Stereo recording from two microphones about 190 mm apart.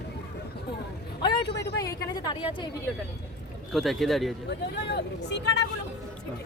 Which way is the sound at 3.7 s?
Centre (ahead or behind).